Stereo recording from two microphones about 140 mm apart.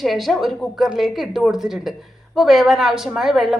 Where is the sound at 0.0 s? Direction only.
Centre (ahead or behind).